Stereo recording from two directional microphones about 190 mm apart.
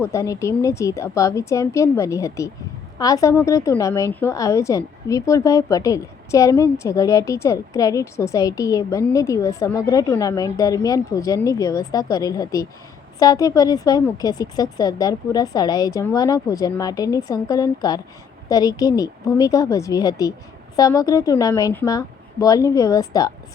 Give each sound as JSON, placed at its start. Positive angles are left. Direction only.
{"t": 0.0, "sound": "a woman's voice", "side_deg": 15}